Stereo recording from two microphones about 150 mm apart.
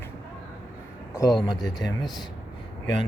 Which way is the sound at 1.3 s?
Centre (ahead or behind).